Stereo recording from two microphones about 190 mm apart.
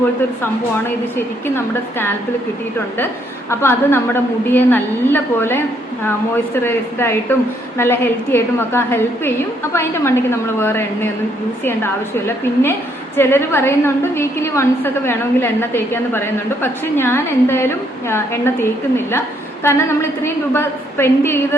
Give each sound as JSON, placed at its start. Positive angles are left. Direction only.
{"t": 1.1, "sound": "a woman's voice", "side_deg": 10}
{"t": 3.5, "sound": "a woman's voice", "side_deg": 15}
{"t": 13.1, "sound": "a woman's voice", "side_deg": 10}